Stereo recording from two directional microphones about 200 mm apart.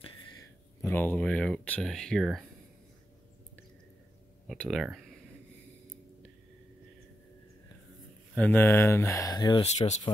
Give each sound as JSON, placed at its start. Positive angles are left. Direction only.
{"t": 0.4, "sound": "speech", "side_deg": 10}
{"t": 4.5, "sound": "speech", "side_deg": 0}
{"t": 8.4, "sound": "speech", "side_deg": 10}
{"t": 9.6, "sound": "speech", "side_deg": 35}